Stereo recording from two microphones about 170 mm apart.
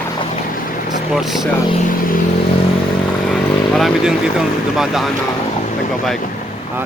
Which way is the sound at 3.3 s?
Centre (ahead or behind).